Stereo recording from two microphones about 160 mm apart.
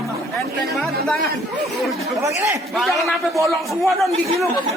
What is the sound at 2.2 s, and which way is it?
Speech, 20° right (ahead or behind).